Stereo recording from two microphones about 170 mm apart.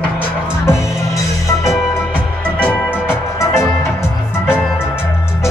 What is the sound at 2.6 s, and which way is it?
Music, 10° left (ahead or behind).